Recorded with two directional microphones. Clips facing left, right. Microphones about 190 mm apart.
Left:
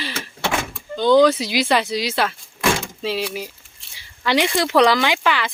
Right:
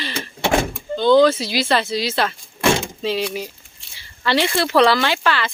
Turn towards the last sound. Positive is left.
turn(degrees=15)  # may be behind; listen again after turning